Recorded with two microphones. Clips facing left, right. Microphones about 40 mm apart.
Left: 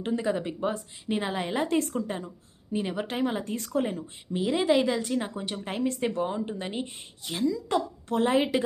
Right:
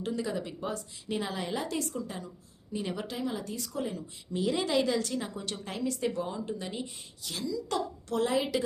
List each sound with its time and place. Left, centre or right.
0.0 s a woman's voice: left
2.7 s a woman's voice: left
3.1 s a woman's voice: left
4.3 s a woman's voice: left